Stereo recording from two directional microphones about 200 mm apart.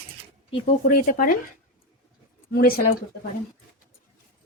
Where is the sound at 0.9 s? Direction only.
45° left (ahead or behind).